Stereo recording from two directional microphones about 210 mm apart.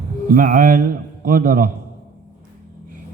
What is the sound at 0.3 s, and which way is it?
A man's voice, 40° right (ahead or behind).